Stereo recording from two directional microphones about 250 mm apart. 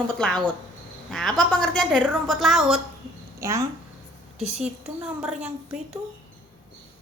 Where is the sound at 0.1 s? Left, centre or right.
Centre.